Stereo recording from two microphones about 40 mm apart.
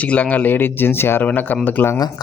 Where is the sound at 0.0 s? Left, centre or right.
Left.